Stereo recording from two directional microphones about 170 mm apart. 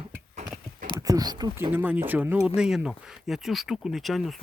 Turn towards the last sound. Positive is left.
turn(degrees=0)  # may be behind; listen again after turning